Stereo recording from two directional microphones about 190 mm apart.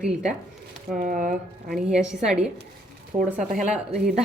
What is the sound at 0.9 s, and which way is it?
Speech, 45° right (ahead or behind).